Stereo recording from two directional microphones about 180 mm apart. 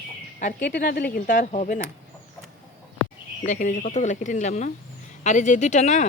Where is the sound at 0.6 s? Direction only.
60° left (ahead or behind); by 1.8 s 45° left (ahead or behind).